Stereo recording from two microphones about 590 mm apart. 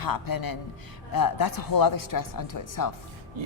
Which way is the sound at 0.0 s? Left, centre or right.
Left.